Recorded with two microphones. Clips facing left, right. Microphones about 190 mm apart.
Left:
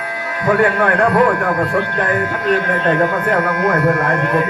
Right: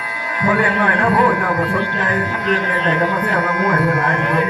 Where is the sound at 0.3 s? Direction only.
50° left (ahead or behind).